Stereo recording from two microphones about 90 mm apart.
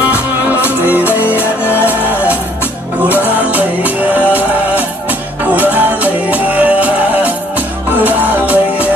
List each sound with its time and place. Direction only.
0.7 s music: 20° right (ahead or behind)